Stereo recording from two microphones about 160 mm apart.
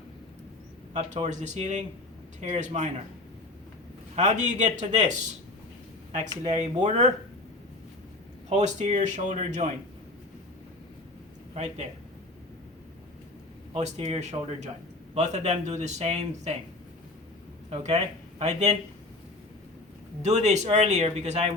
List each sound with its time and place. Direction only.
0.9 s speech: 50° right (ahead or behind)
4.1 s speech: 45° right (ahead or behind)
6.8 s speech: 45° right (ahead or behind)
8.4 s speech: 45° right (ahead or behind)
11.5 s speech: 45° right (ahead or behind)
13.7 s speech: 45° right (ahead or behind)
17.7 s speech: 45° right (ahead or behind)
20.2 s speech: 45° right (ahead or behind)